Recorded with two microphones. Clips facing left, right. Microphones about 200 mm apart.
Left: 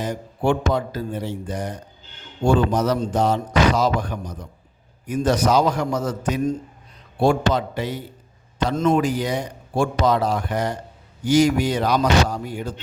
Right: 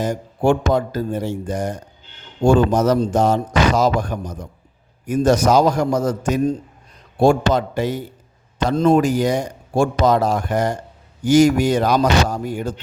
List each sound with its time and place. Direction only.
0.0 s a man's voice: 45° right (ahead or behind)
8.7 s speech: 30° right (ahead or behind)
9.0 s a man's voice: 45° right (ahead or behind)